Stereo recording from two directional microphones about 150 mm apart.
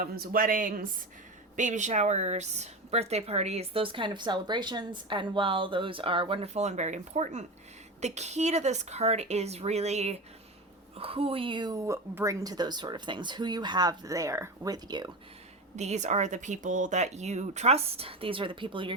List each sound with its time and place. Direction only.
0.0 s speech: 70° right (ahead or behind)
1.5 s a woman's voice: 55° right (ahead or behind); by 15.1 s 25° right (ahead or behind)
15.7 s speech: 50° right (ahead or behind); by 18.9 s 35° right (ahead or behind)